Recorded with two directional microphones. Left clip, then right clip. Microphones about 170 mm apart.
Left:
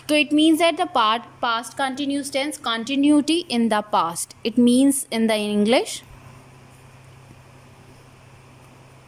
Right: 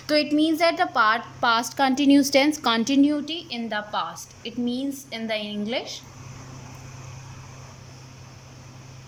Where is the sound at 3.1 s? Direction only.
35° left (ahead or behind).